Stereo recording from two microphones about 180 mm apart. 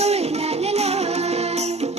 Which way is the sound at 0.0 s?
35° right (ahead or behind).